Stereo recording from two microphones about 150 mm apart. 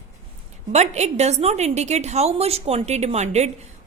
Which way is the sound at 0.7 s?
50° right (ahead or behind).